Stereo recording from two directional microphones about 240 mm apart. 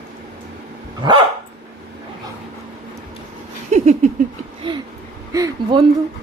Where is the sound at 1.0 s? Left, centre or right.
Centre.